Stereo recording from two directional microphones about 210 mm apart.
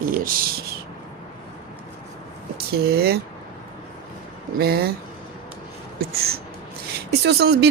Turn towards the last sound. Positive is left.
turn(degrees=-50)  # may be behind; listen again after turning